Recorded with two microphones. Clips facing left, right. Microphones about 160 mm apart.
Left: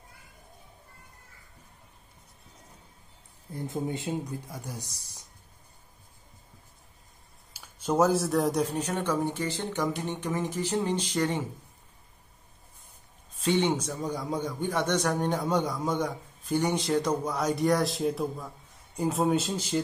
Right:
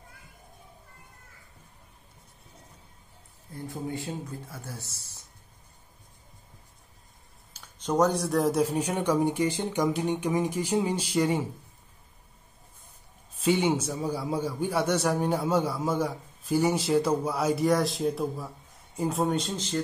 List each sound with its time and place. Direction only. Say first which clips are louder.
3.5 s speech: left 2 dB; 20° left (ahead or behind)
7.5 s speech: even; 10° left (ahead or behind); by 11.4 s 10° right (ahead or behind)
13.4 s a man's voice: right 1 dB; 10° right (ahead or behind); by 19.8 s 10° left (ahead or behind)